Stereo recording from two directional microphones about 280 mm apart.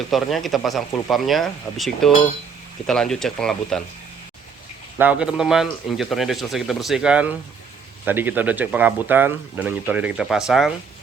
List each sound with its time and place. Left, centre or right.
0.1 s speech: centre
4.9 s speech: centre